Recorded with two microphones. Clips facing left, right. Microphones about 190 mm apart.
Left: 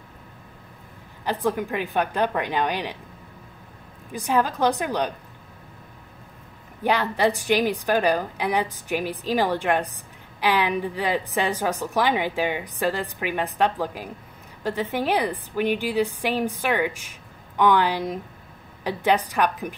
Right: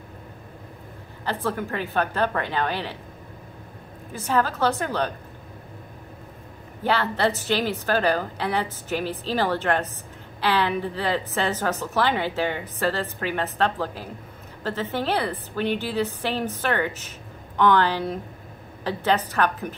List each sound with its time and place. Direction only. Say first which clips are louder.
1.2 s a woman's voice: left 3 dB; 15° left (ahead or behind)
4.1 s a woman's voice: left 1 dB; 15° left (ahead or behind)
6.8 s a woman's voice: left 1 dB; 15° left (ahead or behind)